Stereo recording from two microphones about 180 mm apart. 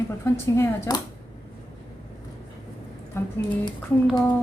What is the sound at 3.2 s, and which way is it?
Speech, 15° left (ahead or behind).